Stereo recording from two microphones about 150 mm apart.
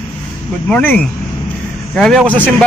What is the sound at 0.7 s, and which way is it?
A man's voice, 10° left (ahead or behind).